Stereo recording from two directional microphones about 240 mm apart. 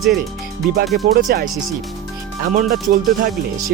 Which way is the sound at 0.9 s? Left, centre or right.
Right.